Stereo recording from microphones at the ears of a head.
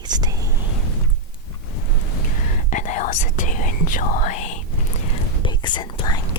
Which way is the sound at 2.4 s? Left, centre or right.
Left.